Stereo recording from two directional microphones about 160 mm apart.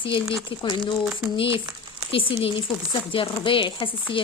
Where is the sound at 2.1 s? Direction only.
35° left (ahead or behind).